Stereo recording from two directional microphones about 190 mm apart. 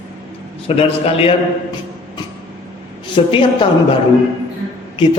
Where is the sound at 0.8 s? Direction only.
30° left (ahead or behind).